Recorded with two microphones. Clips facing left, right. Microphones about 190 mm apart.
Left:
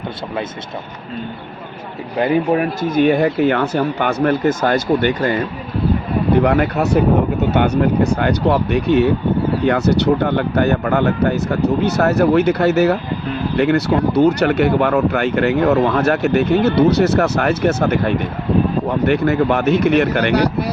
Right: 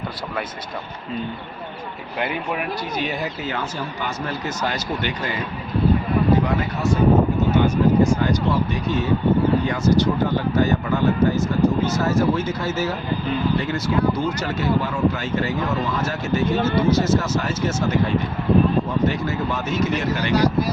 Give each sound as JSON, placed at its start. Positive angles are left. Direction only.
{"t": 2.2, "sound": "speech", "side_deg": 40}
{"t": 6.3, "sound": "speech", "side_deg": 65}